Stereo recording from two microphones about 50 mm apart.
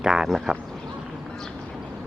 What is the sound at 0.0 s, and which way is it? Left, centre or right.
Speech, centre.